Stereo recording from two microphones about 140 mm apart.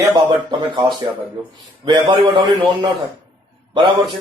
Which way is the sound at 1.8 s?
35° right (ahead or behind).